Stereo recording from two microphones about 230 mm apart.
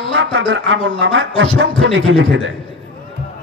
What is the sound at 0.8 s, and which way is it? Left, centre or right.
Speech, right.